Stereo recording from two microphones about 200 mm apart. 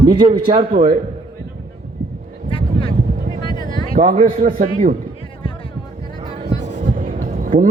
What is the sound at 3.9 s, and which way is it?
Speech, 40° right (ahead or behind).